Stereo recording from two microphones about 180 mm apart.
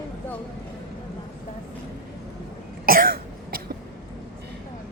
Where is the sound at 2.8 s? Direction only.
55° right (ahead or behind).